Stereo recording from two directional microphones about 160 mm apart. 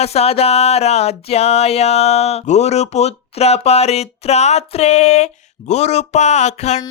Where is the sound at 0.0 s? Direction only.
40° left (ahead or behind).